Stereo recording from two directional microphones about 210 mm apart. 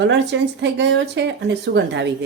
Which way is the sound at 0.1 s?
55° right (ahead or behind).